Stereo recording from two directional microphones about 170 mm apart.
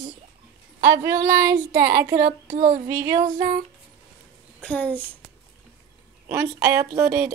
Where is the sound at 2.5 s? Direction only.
45° right (ahead or behind).